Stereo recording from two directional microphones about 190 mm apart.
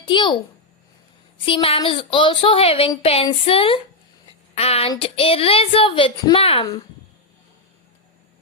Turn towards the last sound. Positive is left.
turn(degrees=25)  # may be behind; listen again after turning